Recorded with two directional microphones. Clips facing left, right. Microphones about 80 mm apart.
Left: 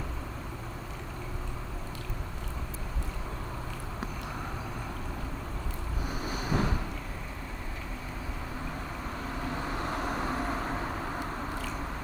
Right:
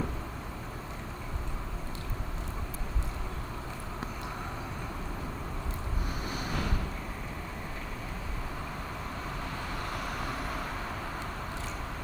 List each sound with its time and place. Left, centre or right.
6.3 s boat: centre
9.7 s vehicle: left